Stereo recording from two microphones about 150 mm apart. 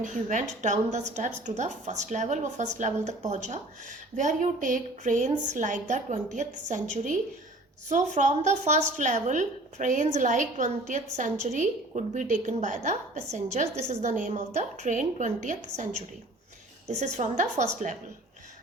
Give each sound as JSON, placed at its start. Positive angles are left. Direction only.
{"t": 0.0, "sound": "a woman's voice", "side_deg": -55}